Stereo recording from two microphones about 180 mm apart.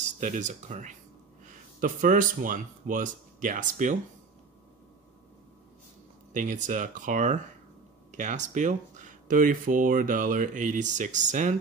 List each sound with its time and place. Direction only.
0.0 s speech: 45° right (ahead or behind)
6.3 s speech: 45° right (ahead or behind)